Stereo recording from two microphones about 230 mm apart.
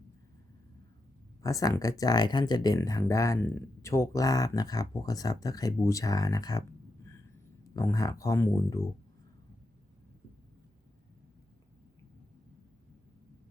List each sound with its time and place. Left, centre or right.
1.4 s speech: centre
7.7 s speech: centre